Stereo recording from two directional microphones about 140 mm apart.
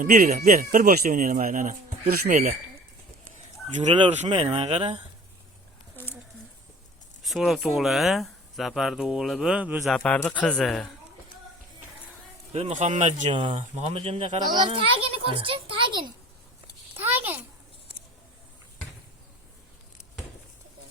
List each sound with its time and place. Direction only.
0.0 s speech: 85° right; by 2.6 s 70° right (ahead or behind)
4.1 s speech: 50° right (ahead or behind)
7.2 s speech: centre (ahead or behind)
9.8 s speech: 5° left (ahead or behind)
12.5 s a man's voice: 50° right (ahead or behind)
13.3 s a child's voice: 35° right (ahead or behind)
13.9 s speech: 45° right (ahead or behind)
14.5 s a child's voice: 35° right (ahead or behind)
17.0 s a sound: 15° right (ahead or behind)